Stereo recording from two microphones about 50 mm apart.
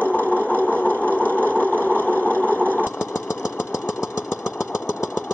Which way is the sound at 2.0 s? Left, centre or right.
Left.